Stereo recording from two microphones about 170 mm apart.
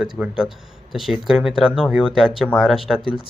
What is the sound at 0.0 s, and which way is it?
Speech, 5° right (ahead or behind).